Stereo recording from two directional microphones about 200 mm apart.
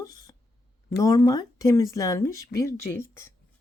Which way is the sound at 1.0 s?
15° left (ahead or behind).